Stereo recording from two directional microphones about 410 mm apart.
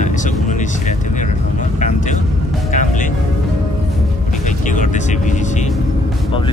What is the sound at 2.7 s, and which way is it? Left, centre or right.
Music, centre.